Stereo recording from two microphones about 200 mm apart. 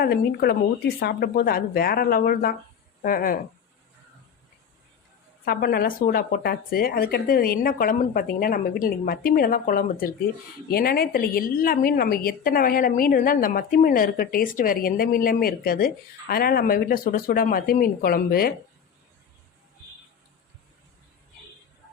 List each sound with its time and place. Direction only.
0.0 s a woman's voice: 50° left (ahead or behind)
5.5 s a woman's voice: 50° left (ahead or behind)